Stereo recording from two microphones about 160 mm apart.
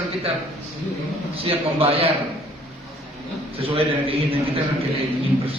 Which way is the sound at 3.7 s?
35° right (ahead or behind).